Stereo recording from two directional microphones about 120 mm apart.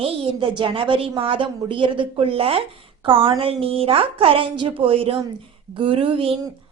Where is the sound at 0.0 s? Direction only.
45° right (ahead or behind).